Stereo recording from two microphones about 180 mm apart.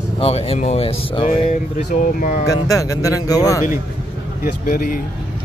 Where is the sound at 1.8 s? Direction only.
55° left (ahead or behind).